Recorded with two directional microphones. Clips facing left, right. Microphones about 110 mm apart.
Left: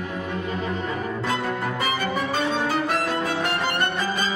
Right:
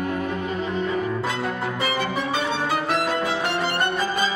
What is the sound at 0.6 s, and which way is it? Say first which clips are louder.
Music: right 3 dB; 40° left (ahead or behind).